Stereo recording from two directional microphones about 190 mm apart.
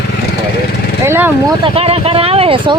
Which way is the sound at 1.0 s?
10° right (ahead or behind).